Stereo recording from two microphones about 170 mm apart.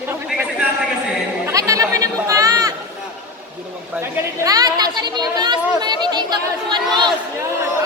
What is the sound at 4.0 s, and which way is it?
A woman's voice, 20° right (ahead or behind).